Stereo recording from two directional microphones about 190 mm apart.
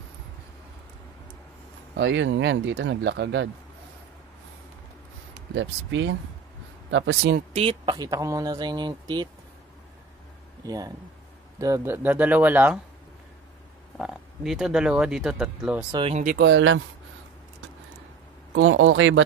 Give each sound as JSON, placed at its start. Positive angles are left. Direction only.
{"t": 2.0, "sound": "speech", "side_deg": -70}
{"t": 5.5, "sound": "speech", "side_deg": -75}
{"t": 7.5, "sound": "speech", "side_deg": -25}
{"t": 10.6, "sound": "speech", "side_deg": -20}
{"t": 13.9, "sound": "speech", "side_deg": -5}
{"t": 15.9, "sound": "speech", "side_deg": -30}
{"t": 16.3, "sound": "speech", "side_deg": -70}
{"t": 18.5, "sound": "speech", "side_deg": -90}